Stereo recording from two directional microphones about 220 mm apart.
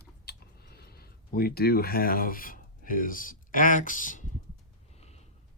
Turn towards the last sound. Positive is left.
turn(degrees=35)  # may be behind; listen again after turning